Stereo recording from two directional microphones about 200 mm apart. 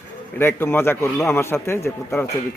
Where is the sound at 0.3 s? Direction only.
10° left (ahead or behind).